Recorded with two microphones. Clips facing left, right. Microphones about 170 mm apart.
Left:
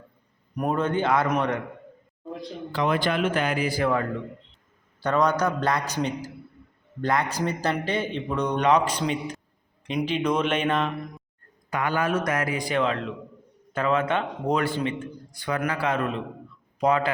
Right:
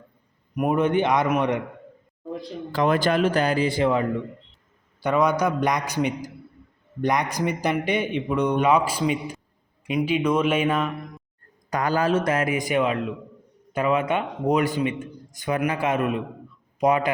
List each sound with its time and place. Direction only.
0.5 s a man's voice: 10° right (ahead or behind)
2.7 s speech: 45° right (ahead or behind); by 4.0 s 20° right (ahead or behind)
4.9 s a man's voice: 10° right (ahead or behind)
11.7 s a man's voice: 35° right (ahead or behind); by 17.1 s 20° right (ahead or behind)